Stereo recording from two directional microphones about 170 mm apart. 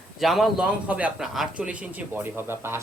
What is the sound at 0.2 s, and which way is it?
A man's voice, centre (ahead or behind).